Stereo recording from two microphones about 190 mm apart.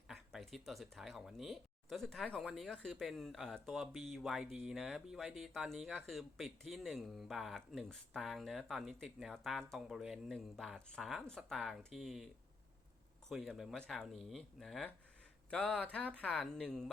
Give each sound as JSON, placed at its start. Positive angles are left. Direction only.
{"t": 0.1, "sound": "speech", "side_deg": 0}